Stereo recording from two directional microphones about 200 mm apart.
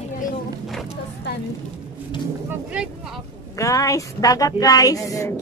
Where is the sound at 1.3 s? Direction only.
60° left (ahead or behind).